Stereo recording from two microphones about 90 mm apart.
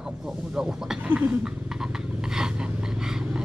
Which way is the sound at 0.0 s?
5° right (ahead or behind).